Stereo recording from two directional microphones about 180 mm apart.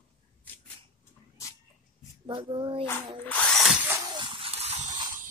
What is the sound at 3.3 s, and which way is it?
Drill, 5° left (ahead or behind).